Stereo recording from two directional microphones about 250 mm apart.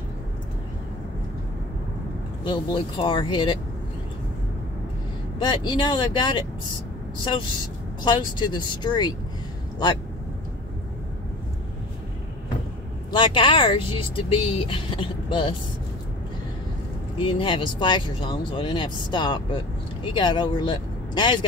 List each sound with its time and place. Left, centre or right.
2.4 s speech: centre
5.4 s speech: centre
8.0 s speech: centre
13.1 s speech: centre
17.2 s speech: centre